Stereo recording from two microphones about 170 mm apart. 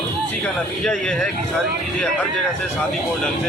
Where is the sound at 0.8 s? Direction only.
5° left (ahead or behind).